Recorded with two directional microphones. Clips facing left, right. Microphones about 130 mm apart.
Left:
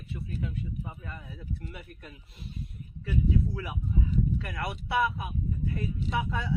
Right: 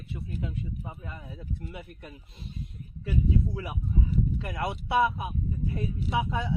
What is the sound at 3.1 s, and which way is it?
Speech, 20° right (ahead or behind).